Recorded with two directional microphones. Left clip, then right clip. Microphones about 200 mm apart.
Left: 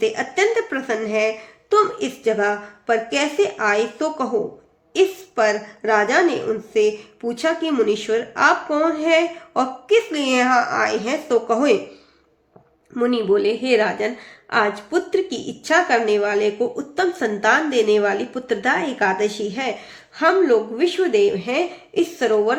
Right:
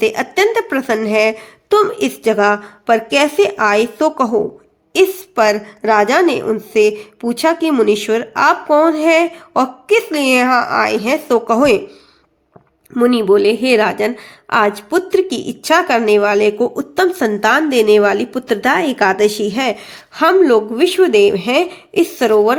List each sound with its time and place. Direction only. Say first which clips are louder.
0.0 s a woman's voice: right 5 dB; 35° right (ahead or behind)
12.9 s a woman's voice: right 7 dB; 35° right (ahead or behind)